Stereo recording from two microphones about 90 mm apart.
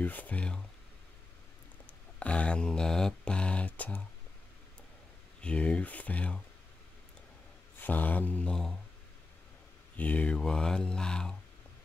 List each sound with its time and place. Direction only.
0.0 s speech: 20° left (ahead or behind)
1.9 s mantra: 15° left (ahead or behind)
5.4 s speech: 15° left (ahead or behind)
7.8 s speech: 20° left (ahead or behind)
9.9 s speech: 15° left (ahead or behind)